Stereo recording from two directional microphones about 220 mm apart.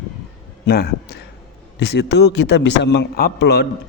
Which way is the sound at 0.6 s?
45° left (ahead or behind).